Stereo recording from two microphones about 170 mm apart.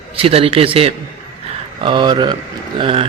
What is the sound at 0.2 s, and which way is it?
A man's voice, 35° right (ahead or behind).